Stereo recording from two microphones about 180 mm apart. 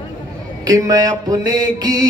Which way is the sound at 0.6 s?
20° right (ahead or behind).